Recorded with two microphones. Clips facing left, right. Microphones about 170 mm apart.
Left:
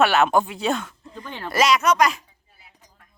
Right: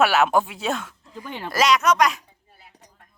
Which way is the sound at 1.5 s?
Centre (ahead or behind).